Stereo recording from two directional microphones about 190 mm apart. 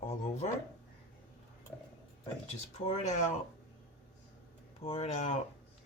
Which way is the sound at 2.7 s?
35° left (ahead or behind).